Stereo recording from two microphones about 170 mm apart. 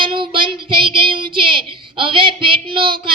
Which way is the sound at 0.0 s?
30° right (ahead or behind).